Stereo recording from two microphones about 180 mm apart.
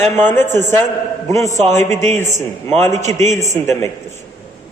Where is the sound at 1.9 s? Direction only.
40° right (ahead or behind).